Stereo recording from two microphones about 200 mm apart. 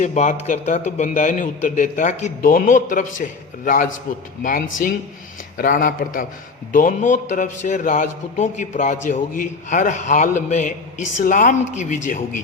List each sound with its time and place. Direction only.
0.0 s a man's voice: 35° left (ahead or behind)
5.5 s a man's voice: 45° left (ahead or behind)